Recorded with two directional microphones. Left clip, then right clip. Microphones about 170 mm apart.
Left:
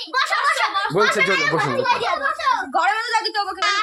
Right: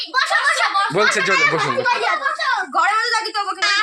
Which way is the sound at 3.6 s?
90° left.